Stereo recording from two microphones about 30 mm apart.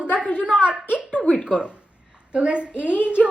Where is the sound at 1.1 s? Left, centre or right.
Left.